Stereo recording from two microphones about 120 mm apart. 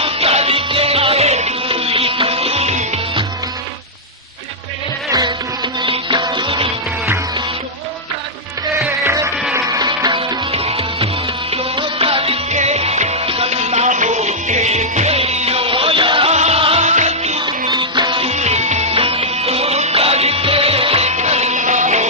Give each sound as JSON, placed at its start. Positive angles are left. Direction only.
{"t": 0.0, "sound": "music", "side_deg": -55}
{"t": 5.8, "sound": "music", "side_deg": -45}
{"t": 9.0, "sound": "music", "side_deg": -25}
{"t": 16.3, "sound": "music", "side_deg": -65}
{"t": 16.8, "sound": "music", "side_deg": -75}
{"t": 17.4, "sound": "music", "side_deg": -40}
{"t": 18.3, "sound": "music", "side_deg": -65}